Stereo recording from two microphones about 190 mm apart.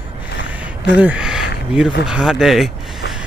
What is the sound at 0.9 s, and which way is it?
Speech, 5° right (ahead or behind).